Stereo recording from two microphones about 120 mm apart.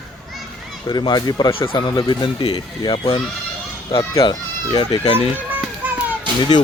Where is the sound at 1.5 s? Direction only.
45° left (ahead or behind).